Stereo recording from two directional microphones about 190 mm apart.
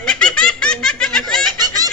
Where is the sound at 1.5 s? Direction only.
20° right (ahead or behind).